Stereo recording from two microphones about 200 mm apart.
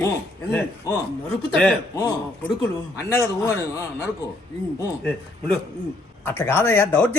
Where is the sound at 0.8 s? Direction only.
15° left (ahead or behind).